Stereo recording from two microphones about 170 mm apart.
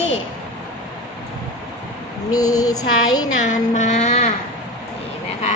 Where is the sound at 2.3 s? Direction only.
20° left (ahead or behind).